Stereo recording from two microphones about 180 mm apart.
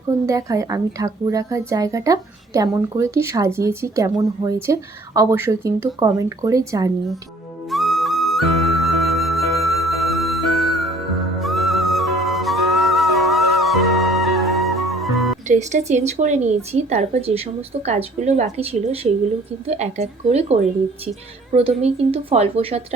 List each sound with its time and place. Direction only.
0.3 s a woman's voice: 20° right (ahead or behind)
7.7 s flute: centre (ahead or behind)
11.4 s music: centre (ahead or behind)
15.4 s speech: 40° right (ahead or behind)